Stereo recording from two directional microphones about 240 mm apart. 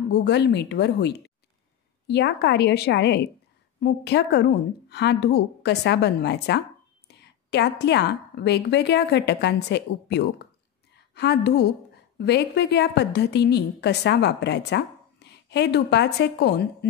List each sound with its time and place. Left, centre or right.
0.1 s a woman's voice: left